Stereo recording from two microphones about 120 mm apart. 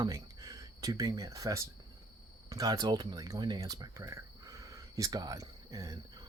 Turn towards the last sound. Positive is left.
turn(degrees=-30)  # may be behind; listen again after turning